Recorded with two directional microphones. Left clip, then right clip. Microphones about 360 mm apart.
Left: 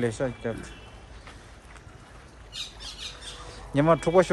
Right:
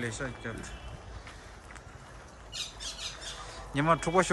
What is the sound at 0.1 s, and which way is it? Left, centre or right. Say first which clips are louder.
Speech: left 8 dB; centre.